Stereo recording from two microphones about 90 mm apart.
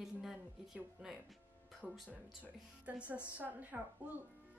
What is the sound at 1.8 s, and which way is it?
Speech, centre (ahead or behind).